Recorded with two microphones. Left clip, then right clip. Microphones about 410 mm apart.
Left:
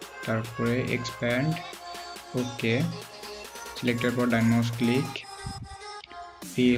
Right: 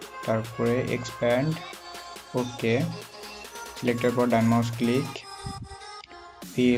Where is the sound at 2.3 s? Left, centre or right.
Centre.